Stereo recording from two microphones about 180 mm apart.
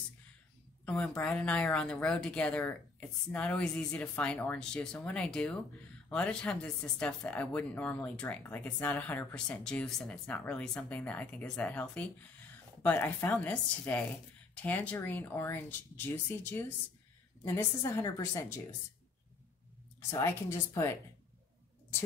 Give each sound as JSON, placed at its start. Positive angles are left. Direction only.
{"t": 0.8, "sound": "speech", "side_deg": 5}
{"t": 17.5, "sound": "speech", "side_deg": 15}
{"t": 20.1, "sound": "speech", "side_deg": 15}